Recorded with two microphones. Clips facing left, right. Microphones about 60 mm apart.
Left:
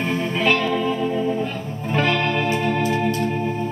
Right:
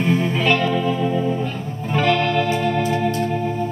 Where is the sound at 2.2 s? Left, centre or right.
Left.